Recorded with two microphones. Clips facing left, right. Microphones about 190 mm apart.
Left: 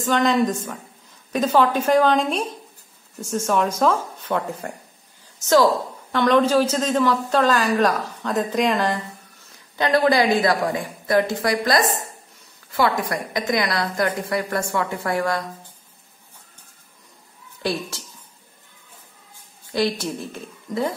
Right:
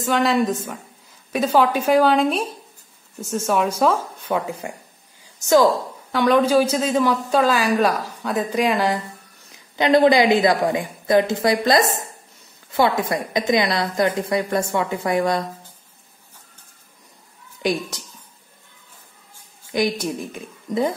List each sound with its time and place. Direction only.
0.0 s speech: 5° right (ahead or behind)
6.1 s speech: 10° right (ahead or behind)
9.8 s a woman's voice: 20° right (ahead or behind)
17.6 s speech: 15° right (ahead or behind)
19.7 s speech: 15° right (ahead or behind)